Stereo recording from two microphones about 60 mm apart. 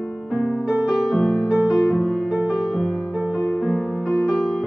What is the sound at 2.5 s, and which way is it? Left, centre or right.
Music, centre.